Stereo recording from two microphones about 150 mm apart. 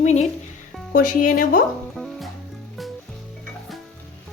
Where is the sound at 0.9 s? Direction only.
65° left (ahead or behind).